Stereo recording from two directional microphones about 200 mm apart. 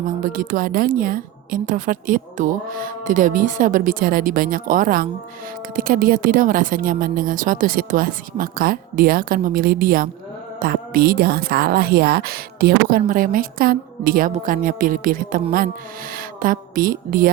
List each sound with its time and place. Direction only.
0.2 s a woman's voice: 40° right (ahead or behind)